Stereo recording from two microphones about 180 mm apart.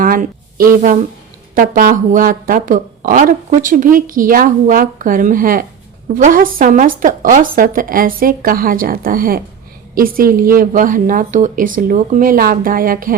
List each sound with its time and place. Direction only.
0.0 s speech: 50° right (ahead or behind)